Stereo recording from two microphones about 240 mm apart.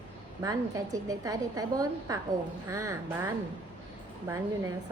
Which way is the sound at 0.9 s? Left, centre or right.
Centre.